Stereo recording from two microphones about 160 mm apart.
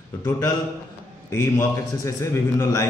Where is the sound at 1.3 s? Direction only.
20° left (ahead or behind).